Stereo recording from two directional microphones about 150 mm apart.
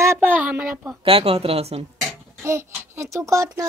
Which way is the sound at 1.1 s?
40° right (ahead or behind).